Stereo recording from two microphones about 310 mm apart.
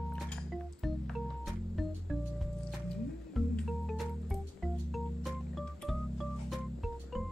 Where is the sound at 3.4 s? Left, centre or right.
Centre.